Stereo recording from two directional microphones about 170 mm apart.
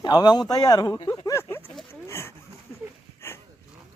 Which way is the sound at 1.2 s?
15° left (ahead or behind).